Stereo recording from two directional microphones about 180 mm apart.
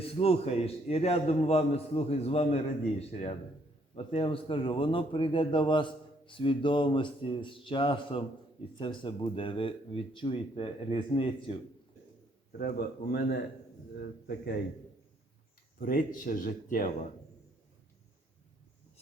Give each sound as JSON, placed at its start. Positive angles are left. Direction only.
{"t": 0.0, "sound": "a man's voice", "side_deg": 35}
{"t": 3.9, "sound": "a man's voice", "side_deg": 30}
{"t": 12.5, "sound": "speech", "side_deg": 55}
{"t": 15.8, "sound": "speech", "side_deg": 55}